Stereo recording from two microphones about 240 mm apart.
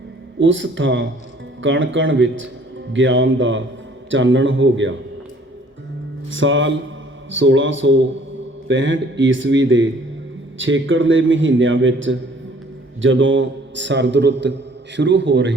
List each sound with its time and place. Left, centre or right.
0.3 s a man's voice: right
6.3 s a man's voice: right